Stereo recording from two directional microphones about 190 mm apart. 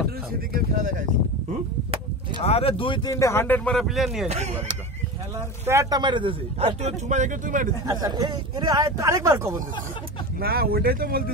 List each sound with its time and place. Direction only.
0.5 s speech: 50° right (ahead or behind)
2.4 s speech: 30° left (ahead or behind); by 4.3 s centre (ahead or behind)
4.3 s speech: 35° right (ahead or behind)
5.7 s speech: 15° right (ahead or behind); by 7.7 s 45° right (ahead or behind)
7.8 s speech: 20° right (ahead or behind)
10.4 s speech: 55° right (ahead or behind)